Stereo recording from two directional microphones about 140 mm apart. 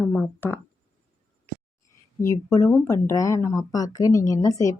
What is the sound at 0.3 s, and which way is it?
Speech, 15° left (ahead or behind).